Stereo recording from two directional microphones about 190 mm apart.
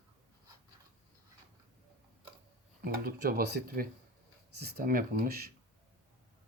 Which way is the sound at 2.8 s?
55° right (ahead or behind).